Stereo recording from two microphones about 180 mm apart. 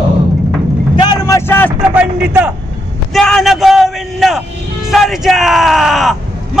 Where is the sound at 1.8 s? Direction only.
10° right (ahead or behind).